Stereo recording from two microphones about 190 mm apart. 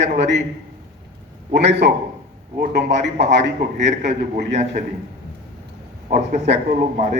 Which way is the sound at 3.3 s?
65° right (ahead or behind).